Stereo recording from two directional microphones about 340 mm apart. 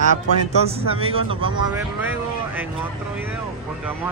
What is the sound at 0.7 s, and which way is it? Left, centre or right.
Speech, centre.